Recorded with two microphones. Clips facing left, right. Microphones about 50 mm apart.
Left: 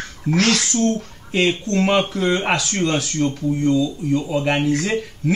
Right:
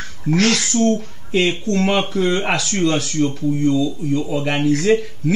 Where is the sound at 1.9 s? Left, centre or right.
Centre.